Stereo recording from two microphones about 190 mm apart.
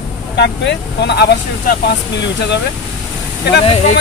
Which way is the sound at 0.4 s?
65° left (ahead or behind).